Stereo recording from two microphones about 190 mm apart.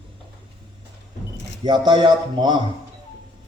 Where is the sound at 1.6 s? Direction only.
25° right (ahead or behind).